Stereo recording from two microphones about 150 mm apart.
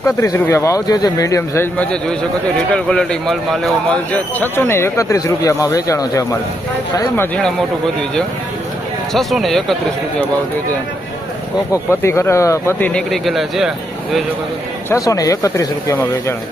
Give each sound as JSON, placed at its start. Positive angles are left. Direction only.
{"t": 0.0, "sound": "speech", "side_deg": 20}
{"t": 4.1, "sound": "speech", "side_deg": 10}
{"t": 9.1, "sound": "speech", "side_deg": 0}
{"t": 11.7, "sound": "speech", "side_deg": 20}
{"t": 14.8, "sound": "speech", "side_deg": 20}